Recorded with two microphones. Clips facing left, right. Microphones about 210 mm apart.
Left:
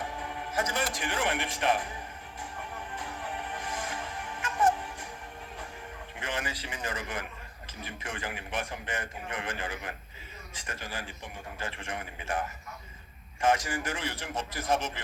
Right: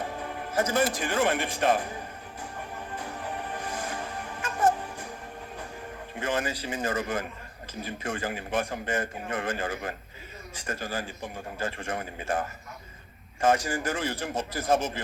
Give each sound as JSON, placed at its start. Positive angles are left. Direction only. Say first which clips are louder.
{"t": 0.0, "sound": "music", "louder": "right 3 dB", "side_deg": -35}
{"t": 0.9, "sound": "speech", "louder": "right 5 dB", "side_deg": -35}
{"t": 2.9, "sound": "music", "louder": "right 4 dB", "side_deg": -40}
{"t": 6.1, "sound": "a man's voice", "louder": "right 7 dB", "side_deg": -40}
{"t": 13.4, "sound": "a man's voice", "louder": "right 3 dB", "side_deg": -35}